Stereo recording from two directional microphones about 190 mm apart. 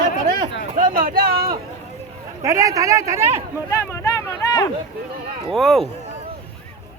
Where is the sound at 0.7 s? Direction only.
45° right (ahead or behind).